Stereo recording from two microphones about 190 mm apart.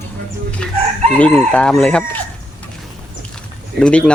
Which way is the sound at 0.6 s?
5° left (ahead or behind).